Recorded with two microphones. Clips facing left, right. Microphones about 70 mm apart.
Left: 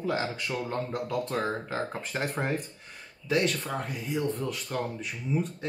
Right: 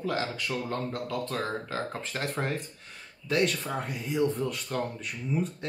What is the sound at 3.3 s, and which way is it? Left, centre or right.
Speech, centre.